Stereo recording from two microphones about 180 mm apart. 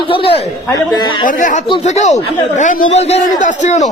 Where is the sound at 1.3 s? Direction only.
45° left (ahead or behind).